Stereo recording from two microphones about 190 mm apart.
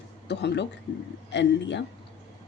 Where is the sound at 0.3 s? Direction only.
65° left (ahead or behind).